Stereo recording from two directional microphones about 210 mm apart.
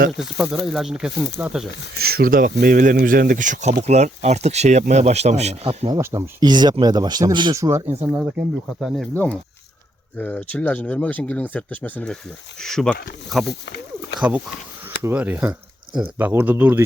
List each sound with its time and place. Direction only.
0.3 s speech: centre (ahead or behind)
2.0 s speech: 45° right (ahead or behind); by 6.0 s 30° right (ahead or behind)
6.0 s speech: 15° right (ahead or behind); by 13.0 s centre (ahead or behind)
13.5 s a sound: 50° left (ahead or behind)
14.2 s speech: 5° right (ahead or behind)